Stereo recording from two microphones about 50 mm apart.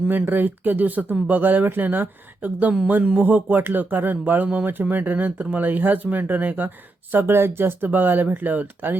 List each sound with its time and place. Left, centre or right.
0.1 s speech: right
2.8 s a sound: right
3.2 s speech: right
7.1 s speech: right